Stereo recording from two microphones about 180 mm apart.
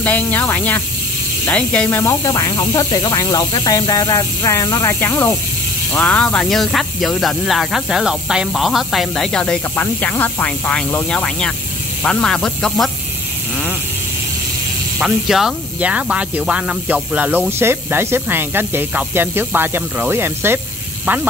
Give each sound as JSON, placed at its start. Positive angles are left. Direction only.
{"t": 0.0, "sound": "speech", "side_deg": 10}
{"t": 15.0, "sound": "speech", "side_deg": 0}